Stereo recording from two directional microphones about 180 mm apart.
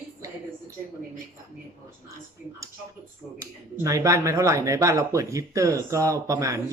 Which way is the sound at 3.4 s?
15° right (ahead or behind).